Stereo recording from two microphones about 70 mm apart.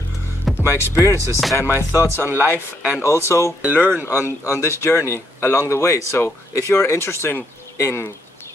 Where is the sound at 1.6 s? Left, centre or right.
Right.